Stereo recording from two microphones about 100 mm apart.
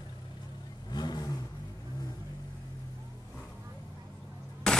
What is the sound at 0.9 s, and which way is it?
Vehicle, 45° left (ahead or behind).